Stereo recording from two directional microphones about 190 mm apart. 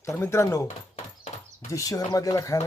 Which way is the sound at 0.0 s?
15° left (ahead or behind).